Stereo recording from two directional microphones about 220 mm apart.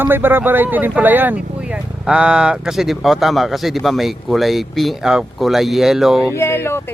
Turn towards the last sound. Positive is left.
turn(degrees=10)  # may be behind; listen again after turning